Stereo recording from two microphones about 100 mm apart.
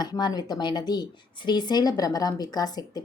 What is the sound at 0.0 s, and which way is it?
A woman's voice, 45° left (ahead or behind).